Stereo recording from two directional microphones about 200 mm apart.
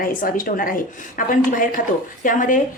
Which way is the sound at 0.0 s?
45° left (ahead or behind).